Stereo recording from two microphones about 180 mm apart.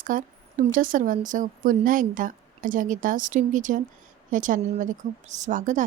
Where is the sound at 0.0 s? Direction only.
50° right (ahead or behind).